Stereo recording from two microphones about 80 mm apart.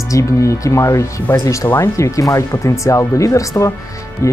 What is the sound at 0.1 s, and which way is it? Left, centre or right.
Speech, left.